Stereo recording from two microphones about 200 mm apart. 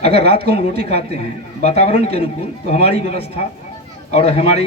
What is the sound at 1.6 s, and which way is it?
Speech, 30° left (ahead or behind).